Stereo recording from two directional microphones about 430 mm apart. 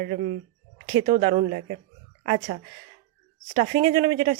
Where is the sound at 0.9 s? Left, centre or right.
Centre.